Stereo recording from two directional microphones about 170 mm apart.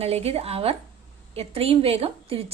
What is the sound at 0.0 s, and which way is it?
A woman's voice, 35° right (ahead or behind).